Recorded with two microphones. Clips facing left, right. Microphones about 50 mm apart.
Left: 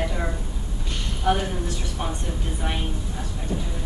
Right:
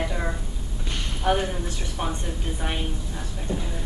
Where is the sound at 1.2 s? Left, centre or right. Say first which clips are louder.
Left 1 dB; right.